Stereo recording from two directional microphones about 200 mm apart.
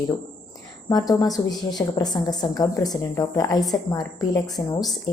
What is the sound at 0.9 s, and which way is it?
A woman's voice, 20° left (ahead or behind).